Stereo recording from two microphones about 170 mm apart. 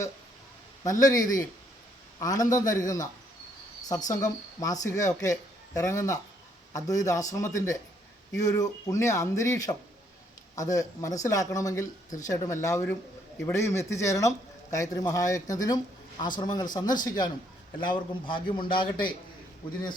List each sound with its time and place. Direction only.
0.9 s a man's voice: 20° left (ahead or behind)
4.1 s a man's voice: 20° left (ahead or behind)